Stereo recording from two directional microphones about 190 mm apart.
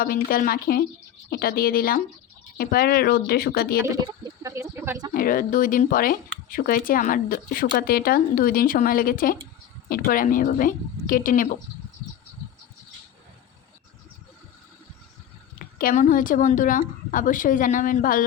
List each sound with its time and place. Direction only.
0.0 s speech: 50° left (ahead or behind)
3.8 s speech: 20° right (ahead or behind)
5.1 s speech: 50° left (ahead or behind)
15.5 s speech: 45° left (ahead or behind)